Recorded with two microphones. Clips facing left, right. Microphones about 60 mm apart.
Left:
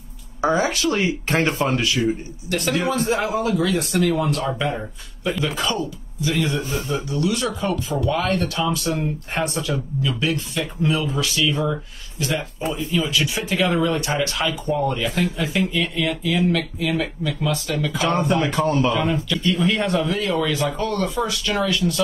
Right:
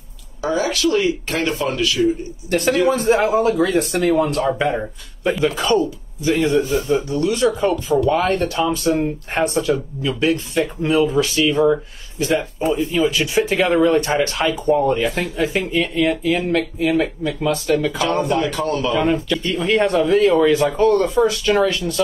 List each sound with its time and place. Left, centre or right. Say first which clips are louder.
0.4 s speech: even; left
2.5 s speech: right 5 dB; right
17.9 s speech: right 1 dB; left
18.9 s speech: right 4 dB; right